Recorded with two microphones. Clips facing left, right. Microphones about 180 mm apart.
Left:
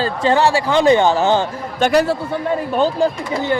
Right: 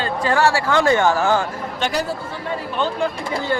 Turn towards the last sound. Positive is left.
turn(degrees=40)  # may be behind; listen again after turning